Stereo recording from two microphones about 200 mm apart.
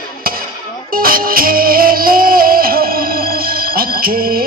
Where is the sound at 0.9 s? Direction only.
45° right (ahead or behind).